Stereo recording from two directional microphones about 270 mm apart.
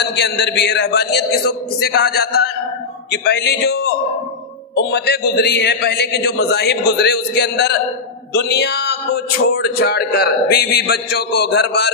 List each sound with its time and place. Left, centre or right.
0.0 s a man's voice: left